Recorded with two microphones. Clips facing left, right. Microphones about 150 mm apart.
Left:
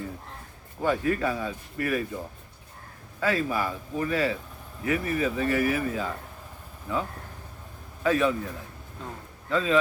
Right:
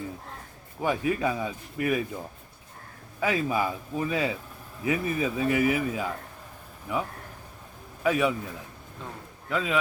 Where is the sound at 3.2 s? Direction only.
15° right (ahead or behind).